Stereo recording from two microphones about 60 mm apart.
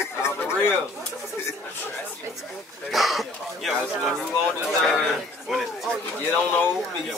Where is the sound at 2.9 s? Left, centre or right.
Centre.